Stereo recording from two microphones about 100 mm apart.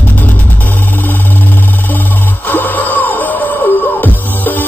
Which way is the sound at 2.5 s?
15° left (ahead or behind).